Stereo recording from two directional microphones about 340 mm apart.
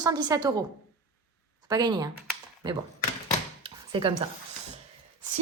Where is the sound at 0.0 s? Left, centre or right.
Centre.